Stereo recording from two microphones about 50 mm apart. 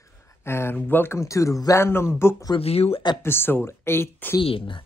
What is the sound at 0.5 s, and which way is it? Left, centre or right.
Speech, left.